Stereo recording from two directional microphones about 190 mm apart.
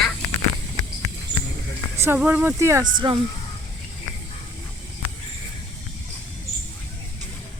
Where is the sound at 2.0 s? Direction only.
10° right (ahead or behind).